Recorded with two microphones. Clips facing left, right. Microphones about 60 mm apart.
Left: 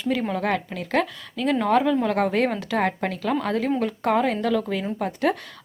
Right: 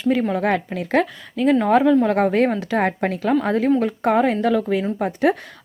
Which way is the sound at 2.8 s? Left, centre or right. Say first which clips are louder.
Right 4 dB; right.